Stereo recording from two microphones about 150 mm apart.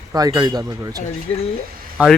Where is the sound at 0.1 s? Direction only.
25° right (ahead or behind).